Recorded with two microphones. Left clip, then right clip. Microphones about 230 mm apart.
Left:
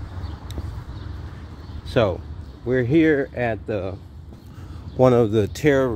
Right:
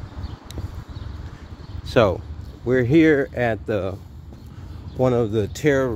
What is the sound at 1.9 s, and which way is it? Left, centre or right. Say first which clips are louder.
Speech: right 3 dB; right.